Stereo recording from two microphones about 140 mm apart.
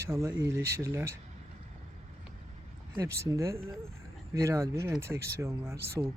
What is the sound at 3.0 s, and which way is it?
Speech, 20° right (ahead or behind).